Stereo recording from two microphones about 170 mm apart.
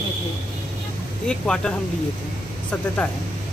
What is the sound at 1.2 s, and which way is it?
Speech, 5° left (ahead or behind).